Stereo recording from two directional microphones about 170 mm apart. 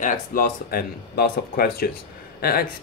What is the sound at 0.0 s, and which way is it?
Speech, 60° left (ahead or behind).